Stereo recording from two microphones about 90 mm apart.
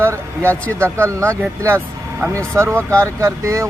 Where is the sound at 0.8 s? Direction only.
30° right (ahead or behind).